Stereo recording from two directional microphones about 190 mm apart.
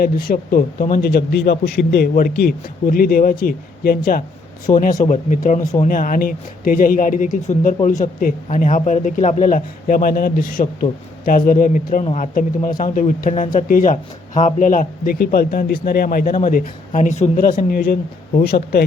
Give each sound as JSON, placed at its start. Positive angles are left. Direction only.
{"t": 0.0, "sound": "speech", "side_deg": 50}
{"t": 18.3, "sound": "speech", "side_deg": 55}